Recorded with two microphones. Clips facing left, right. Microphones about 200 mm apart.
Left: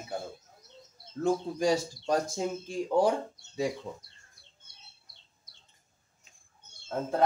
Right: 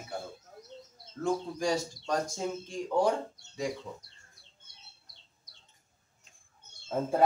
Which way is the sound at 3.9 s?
25° left (ahead or behind).